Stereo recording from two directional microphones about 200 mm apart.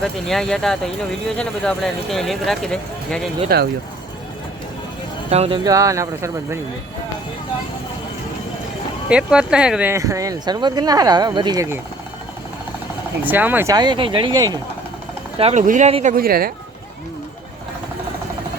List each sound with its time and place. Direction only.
0.0 s speech: centre (ahead or behind)
3.5 s speech: 50° right (ahead or behind)
5.3 s speech: 30° right (ahead or behind)
5.6 s speech: 15° right (ahead or behind)
9.0 s speech: 5° right (ahead or behind)
13.2 s speech: 10° right (ahead or behind)
15.4 s speech: 35° right (ahead or behind)
16.1 s speech: 50° right (ahead or behind)